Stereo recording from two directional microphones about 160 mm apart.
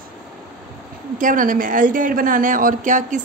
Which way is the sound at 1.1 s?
55° right (ahead or behind).